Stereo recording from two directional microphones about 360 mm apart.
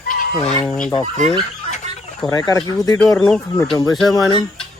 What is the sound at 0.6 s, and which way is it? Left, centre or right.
Fowl, centre.